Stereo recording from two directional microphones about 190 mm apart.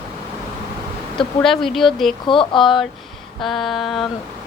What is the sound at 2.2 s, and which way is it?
Speech, 25° left (ahead or behind).